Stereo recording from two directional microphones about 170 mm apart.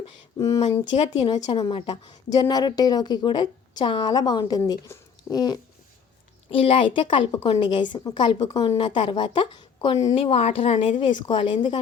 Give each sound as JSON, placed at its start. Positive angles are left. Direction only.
{"t": 0.3, "sound": "a woman's voice", "side_deg": 20}
{"t": 0.9, "sound": "a woman's voice", "side_deg": 35}
{"t": 1.5, "sound": "a woman's voice", "side_deg": 25}
{"t": 10.2, "sound": "a woman's voice", "side_deg": 35}